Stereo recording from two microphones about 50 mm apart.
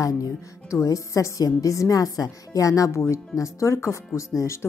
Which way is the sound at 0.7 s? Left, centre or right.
Left.